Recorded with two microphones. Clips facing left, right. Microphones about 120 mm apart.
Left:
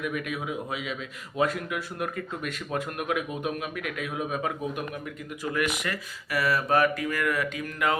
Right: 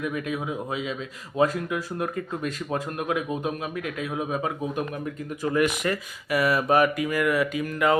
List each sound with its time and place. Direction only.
0.0 s speech: 30° right (ahead or behind)
6.3 s speech: 20° right (ahead or behind)